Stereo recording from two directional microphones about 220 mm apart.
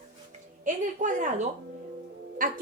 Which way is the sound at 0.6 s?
35° right (ahead or behind).